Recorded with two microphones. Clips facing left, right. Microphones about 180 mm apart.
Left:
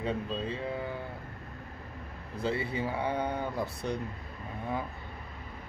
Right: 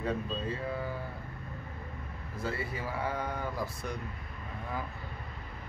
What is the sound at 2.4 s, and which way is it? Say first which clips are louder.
Speech: left 5 dB; 25° left (ahead or behind).